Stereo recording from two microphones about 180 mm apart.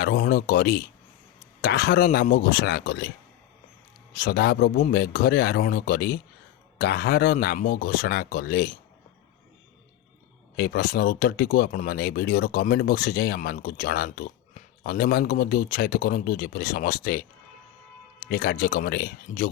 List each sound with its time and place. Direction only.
0.0 s speech: 60° left (ahead or behind)
4.1 s speech: 60° left (ahead or behind)
10.6 s speech: 55° left (ahead or behind)
18.3 s speech: 55° left (ahead or behind)